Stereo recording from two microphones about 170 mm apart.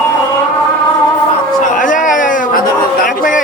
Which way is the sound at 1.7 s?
50° left (ahead or behind).